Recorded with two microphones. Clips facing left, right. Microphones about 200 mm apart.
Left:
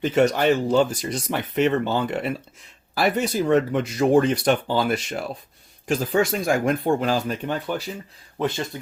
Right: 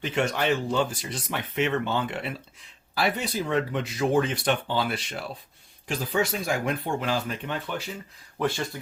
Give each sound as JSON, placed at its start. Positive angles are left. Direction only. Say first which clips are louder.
{"t": 0.0, "sound": "speech", "louder": "left 7 dB", "side_deg": 40}
{"t": 8.4, "sound": "speech", "louder": "left 2 dB", "side_deg": 20}